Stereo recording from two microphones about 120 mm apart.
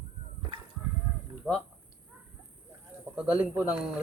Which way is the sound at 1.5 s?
10° left (ahead or behind).